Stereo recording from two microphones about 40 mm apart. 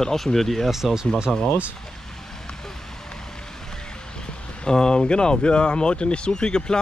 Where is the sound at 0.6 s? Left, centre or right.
Centre.